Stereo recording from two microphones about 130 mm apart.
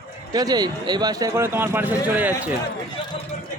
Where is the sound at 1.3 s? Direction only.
20° right (ahead or behind).